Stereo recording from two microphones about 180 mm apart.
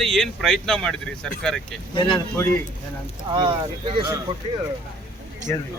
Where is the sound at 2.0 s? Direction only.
25° left (ahead or behind).